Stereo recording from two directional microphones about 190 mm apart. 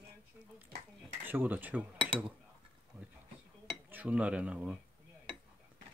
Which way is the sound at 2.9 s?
10° right (ahead or behind).